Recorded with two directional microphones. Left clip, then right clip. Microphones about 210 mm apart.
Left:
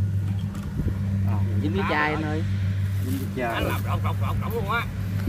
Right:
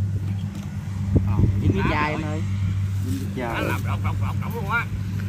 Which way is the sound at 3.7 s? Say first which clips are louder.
Even; 55° left (ahead or behind).